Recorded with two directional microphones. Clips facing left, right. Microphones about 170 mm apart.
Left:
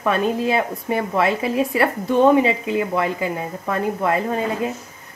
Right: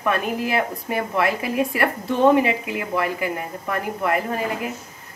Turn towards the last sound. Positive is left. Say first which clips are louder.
# left 3 dB
turn(degrees=25)  # may be behind; listen again after turning